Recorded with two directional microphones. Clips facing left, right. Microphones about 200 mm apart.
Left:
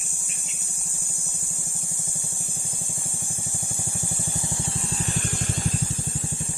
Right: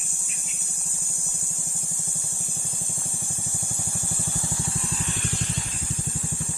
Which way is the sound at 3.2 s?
15° left (ahead or behind).